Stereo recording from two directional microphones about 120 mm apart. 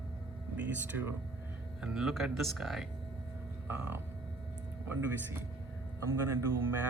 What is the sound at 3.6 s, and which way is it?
Speech, 15° right (ahead or behind).